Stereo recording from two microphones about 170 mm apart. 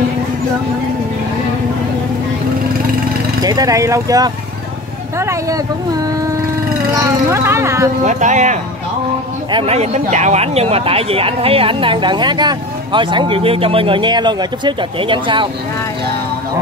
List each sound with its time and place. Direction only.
3.4 s speech: 20° right (ahead or behind)
8.0 s speech: 45° right (ahead or behind)
9.5 s speech: 35° right (ahead or behind)